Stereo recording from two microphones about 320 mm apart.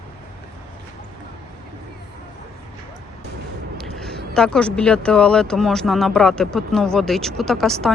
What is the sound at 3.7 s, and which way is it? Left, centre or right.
A woman's voice, centre.